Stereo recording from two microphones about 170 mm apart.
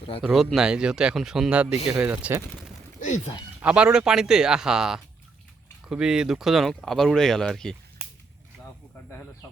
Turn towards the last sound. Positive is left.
turn(degrees=5)  # may be behind; listen again after turning